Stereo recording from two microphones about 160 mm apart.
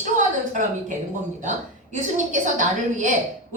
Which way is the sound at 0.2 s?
50° right (ahead or behind).